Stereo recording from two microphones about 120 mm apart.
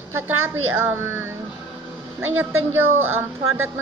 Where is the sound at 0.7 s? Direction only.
20° right (ahead or behind).